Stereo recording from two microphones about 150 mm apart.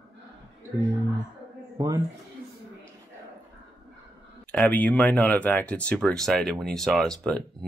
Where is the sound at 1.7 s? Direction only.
25° right (ahead or behind).